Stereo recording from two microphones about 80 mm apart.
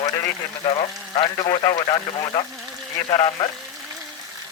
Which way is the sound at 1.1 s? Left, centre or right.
Left.